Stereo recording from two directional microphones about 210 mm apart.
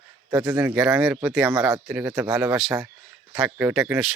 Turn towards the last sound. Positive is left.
turn(degrees=-5)  # may be behind; listen again after turning